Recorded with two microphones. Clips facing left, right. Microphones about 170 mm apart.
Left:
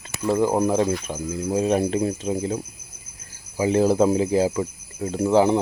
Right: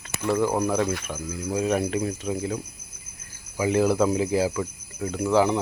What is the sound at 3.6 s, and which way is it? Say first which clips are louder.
Speech: left 3 dB; 30° left (ahead or behind).